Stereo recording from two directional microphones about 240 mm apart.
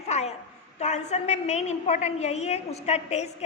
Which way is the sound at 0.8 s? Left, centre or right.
Left.